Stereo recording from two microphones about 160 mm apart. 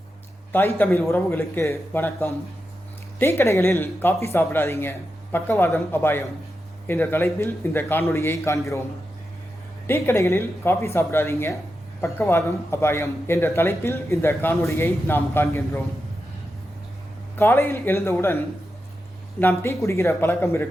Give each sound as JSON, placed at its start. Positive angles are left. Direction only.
{"t": 0.5, "sound": "a man's voice", "side_deg": 10}
{"t": 9.8, "sound": "a man's voice", "side_deg": 15}
{"t": 17.3, "sound": "a man's voice", "side_deg": 15}
{"t": 19.4, "sound": "a man's voice", "side_deg": 15}